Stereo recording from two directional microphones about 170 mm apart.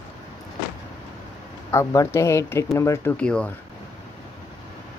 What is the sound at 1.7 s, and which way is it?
Speech, 20° left (ahead or behind).